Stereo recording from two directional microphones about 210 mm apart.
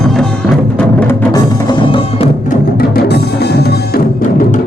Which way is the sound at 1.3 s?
20° left (ahead or behind).